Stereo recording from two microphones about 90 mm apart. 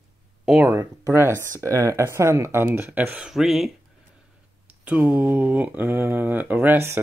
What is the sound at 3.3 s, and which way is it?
Speech, 5° right (ahead or behind).